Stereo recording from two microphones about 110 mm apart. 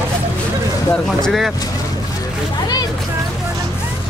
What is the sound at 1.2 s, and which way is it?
Speech, centre (ahead or behind).